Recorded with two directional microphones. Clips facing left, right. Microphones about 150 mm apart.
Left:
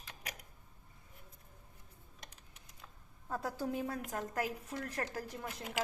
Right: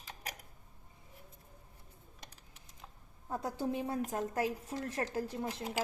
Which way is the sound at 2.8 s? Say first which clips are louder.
Right 3 dB; 20° right (ahead or behind).